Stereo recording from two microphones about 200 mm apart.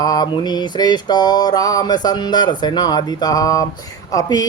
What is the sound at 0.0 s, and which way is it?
Mantra, 20° left (ahead or behind).